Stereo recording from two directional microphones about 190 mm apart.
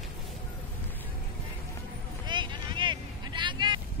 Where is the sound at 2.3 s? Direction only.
25° right (ahead or behind).